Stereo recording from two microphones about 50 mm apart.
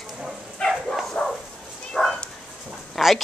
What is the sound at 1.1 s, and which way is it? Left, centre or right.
Bow-wow, left.